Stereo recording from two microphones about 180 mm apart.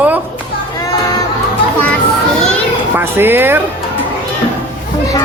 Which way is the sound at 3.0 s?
10° right (ahead or behind).